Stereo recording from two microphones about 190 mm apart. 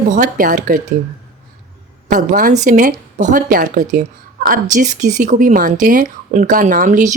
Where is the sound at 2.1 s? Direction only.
45° right (ahead or behind).